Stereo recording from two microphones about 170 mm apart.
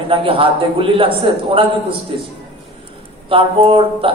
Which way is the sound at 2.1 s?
30° right (ahead or behind).